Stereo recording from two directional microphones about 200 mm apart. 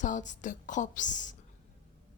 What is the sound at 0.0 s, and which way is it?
Speech, 40° left (ahead or behind).